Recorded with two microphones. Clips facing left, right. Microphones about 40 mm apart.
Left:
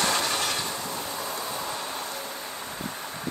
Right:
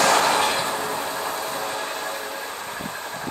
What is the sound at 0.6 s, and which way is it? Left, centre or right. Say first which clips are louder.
Train: right 7 dB; right.